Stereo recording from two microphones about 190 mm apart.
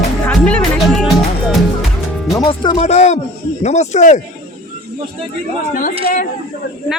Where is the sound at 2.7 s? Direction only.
35° left (ahead or behind).